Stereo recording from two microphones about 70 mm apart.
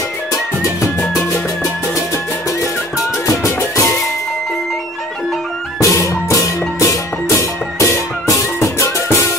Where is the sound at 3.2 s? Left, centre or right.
Left.